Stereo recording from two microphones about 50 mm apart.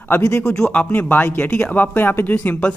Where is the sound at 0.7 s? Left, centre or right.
Left.